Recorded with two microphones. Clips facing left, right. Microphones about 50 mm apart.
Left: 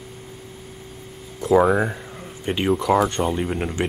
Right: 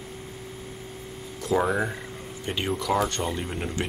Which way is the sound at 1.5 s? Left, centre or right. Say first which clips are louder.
Left 8 dB; centre.